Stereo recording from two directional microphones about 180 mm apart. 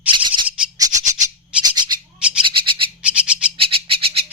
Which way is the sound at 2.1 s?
5° right (ahead or behind).